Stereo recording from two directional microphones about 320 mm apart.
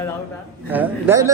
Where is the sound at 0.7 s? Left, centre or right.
Centre.